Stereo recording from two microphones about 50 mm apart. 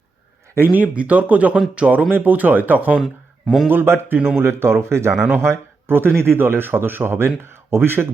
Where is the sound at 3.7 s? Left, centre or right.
Right.